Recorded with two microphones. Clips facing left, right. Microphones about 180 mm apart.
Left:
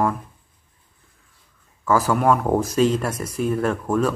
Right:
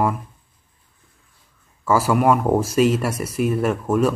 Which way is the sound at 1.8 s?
10° right (ahead or behind).